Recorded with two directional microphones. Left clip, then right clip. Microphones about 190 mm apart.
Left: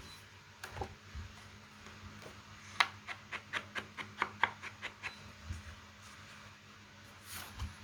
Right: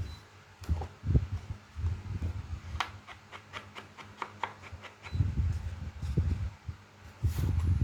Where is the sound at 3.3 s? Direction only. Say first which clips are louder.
Left 4 dB; 20° left (ahead or behind).